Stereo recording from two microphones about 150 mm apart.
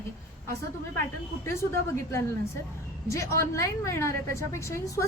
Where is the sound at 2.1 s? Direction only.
15° left (ahead or behind).